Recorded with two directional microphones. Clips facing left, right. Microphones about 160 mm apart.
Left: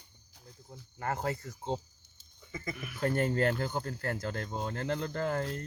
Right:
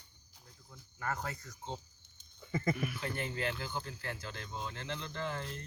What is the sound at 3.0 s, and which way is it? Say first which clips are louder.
Speech: left 9 dB; 45° left (ahead or behind).